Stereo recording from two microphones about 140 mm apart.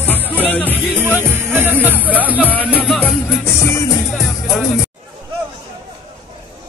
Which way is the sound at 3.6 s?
20° left (ahead or behind).